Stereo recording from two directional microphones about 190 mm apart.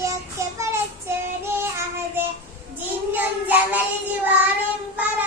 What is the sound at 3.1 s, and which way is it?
Child singing, 10° right (ahead or behind).